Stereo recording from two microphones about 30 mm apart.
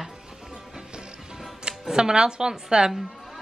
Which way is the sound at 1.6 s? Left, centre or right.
Right.